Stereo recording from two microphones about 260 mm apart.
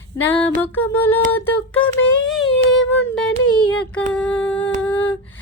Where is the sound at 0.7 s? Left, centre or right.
Centre.